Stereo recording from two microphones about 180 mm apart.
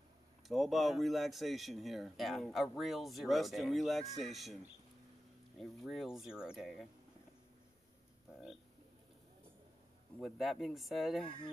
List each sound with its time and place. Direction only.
0.5 s speech: centre (ahead or behind)
5.6 s speech: centre (ahead or behind)
10.1 s speech: centre (ahead or behind)
11.2 s speech: 25° left (ahead or behind)